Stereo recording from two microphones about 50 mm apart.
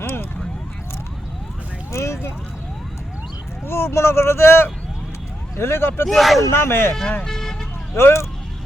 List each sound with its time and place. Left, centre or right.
0.0 s a sound: left
1.9 s a sound: left
3.7 s speech: left
6.1 s speech: centre
6.4 s speech: left
7.3 s vehicle: centre
7.9 s speech: left